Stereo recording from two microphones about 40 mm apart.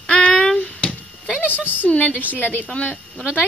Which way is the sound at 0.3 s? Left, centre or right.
Centre.